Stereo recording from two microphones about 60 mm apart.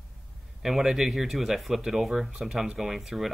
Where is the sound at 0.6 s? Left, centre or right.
Centre.